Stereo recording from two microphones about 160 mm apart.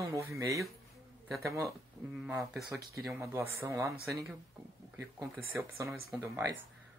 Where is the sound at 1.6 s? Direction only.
5° right (ahead or behind).